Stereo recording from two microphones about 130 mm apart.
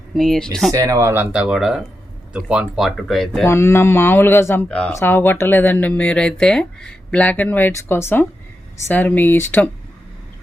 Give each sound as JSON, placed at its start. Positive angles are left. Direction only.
{"t": 0.1, "sound": "speech", "side_deg": 0}
{"t": 0.7, "sound": "speech", "side_deg": -25}
{"t": 3.4, "sound": "speech", "side_deg": 20}